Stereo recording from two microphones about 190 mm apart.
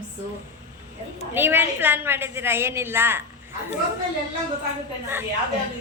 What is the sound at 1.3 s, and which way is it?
A woman's voice, 10° right (ahead or behind).